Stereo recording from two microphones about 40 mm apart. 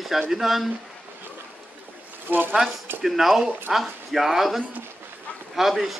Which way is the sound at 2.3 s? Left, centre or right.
Right.